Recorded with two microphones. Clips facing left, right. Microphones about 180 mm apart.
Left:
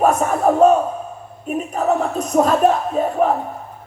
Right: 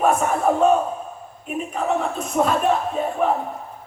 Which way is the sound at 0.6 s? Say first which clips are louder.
Left 4 dB; 40° left (ahead or behind).